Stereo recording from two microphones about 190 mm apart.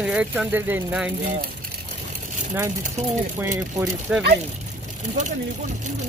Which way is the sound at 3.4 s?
10° right (ahead or behind).